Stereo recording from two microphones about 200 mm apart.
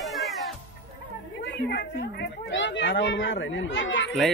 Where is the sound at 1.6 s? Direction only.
55° left (ahead or behind).